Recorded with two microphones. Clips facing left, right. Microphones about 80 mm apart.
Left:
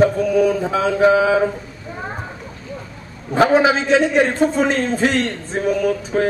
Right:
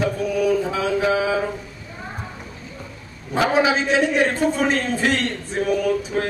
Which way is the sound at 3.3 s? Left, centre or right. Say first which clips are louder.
Left 4 dB; left.